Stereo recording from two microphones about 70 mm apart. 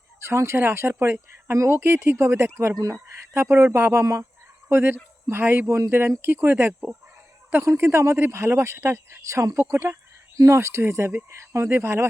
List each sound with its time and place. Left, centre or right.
0.2 s speech: right
2.7 s speech: right
3.3 s speech: right
4.0 s speech: right
4.7 s speech: right